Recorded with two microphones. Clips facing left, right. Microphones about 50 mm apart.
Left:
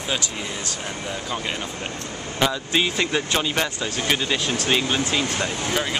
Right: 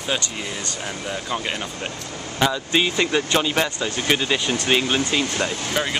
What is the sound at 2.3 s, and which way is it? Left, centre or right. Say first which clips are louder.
Speech: right 2 dB; centre.